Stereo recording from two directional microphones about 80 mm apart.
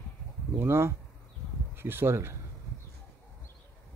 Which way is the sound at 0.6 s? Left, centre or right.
Right.